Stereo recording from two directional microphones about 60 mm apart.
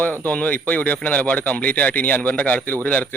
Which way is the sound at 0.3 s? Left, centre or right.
Left.